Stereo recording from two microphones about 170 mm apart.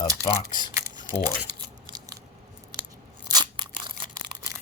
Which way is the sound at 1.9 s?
25° right (ahead or behind).